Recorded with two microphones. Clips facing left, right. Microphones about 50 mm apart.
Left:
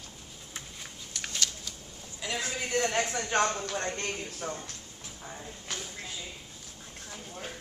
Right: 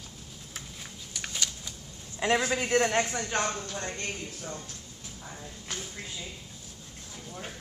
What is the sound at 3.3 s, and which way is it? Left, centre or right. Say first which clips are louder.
Speech: left 3 dB; left.